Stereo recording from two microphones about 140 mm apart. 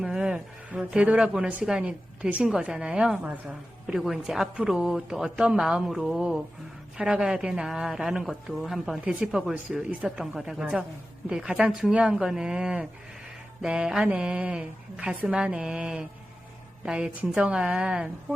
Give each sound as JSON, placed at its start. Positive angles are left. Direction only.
{"t": 0.0, "sound": "a woman's voice", "side_deg": -5}